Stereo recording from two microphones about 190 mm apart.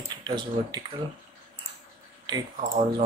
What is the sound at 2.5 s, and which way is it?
Speech, 45° right (ahead or behind).